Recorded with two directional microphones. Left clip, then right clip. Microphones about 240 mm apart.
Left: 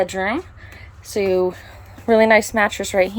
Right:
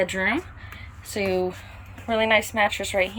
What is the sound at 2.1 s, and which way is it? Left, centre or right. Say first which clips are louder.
Speech: left 7 dB; left.